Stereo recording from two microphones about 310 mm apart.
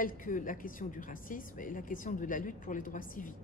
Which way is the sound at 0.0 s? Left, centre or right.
Left.